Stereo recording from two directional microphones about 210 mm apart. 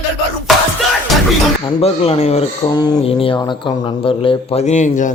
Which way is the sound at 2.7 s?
20° left (ahead or behind).